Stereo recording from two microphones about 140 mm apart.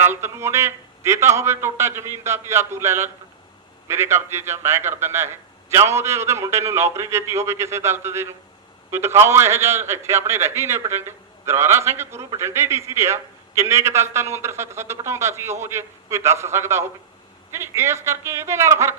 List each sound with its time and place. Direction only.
0.1 s a man's voice: 20° right (ahead or behind)